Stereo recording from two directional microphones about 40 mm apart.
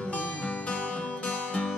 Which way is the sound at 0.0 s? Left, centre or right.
Left.